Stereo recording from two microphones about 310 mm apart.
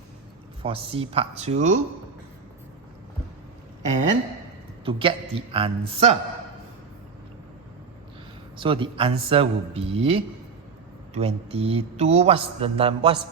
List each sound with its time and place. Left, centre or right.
0.6 s a man's voice: centre
4.9 s speech: centre
8.5 s a man's voice: centre